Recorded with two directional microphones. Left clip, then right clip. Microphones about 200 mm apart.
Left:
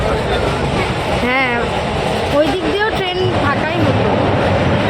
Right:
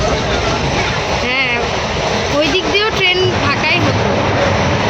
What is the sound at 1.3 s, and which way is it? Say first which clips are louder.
Vehicle: left 1 dB; 15° left (ahead or behind).